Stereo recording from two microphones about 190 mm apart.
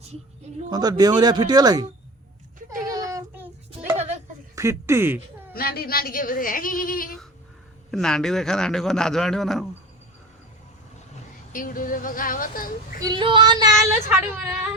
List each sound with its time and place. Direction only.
0.7 s speech: 20° right (ahead or behind)
2.6 s child singing: 20° right (ahead or behind)
3.7 s a sound: 35° right (ahead or behind)
4.5 s speech: 15° right (ahead or behind)
5.5 s speech: 55° left (ahead or behind)
7.9 s a man's voice: centre (ahead or behind)
11.5 s speech: 45° left (ahead or behind)
13.0 s speech: 25° right (ahead or behind)